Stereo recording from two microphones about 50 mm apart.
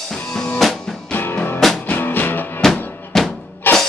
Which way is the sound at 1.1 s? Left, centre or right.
Left.